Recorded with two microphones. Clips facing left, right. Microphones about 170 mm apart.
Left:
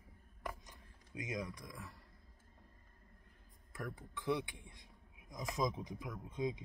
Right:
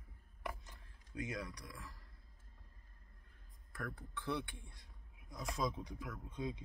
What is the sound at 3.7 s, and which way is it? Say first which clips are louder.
Speech: left 1 dB; 15° left (ahead or behind).